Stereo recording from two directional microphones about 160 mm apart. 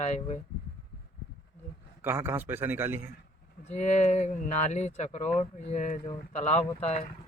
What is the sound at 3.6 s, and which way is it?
Speech, 45° left (ahead or behind).